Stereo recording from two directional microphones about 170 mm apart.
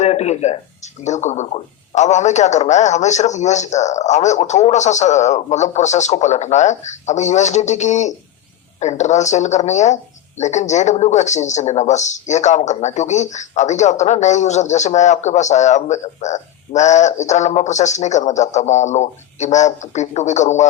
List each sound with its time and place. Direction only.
0.0 s speech: 40° left (ahead or behind)